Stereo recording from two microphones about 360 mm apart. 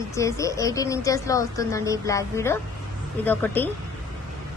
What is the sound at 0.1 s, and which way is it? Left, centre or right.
A woman's voice, centre.